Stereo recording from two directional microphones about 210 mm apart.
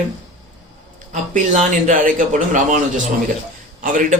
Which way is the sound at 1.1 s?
35° right (ahead or behind).